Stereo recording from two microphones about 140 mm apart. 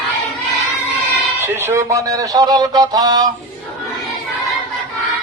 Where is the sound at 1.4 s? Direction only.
15° right (ahead or behind).